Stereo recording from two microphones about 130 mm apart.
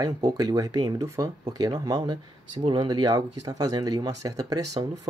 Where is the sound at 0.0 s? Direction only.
30° right (ahead or behind).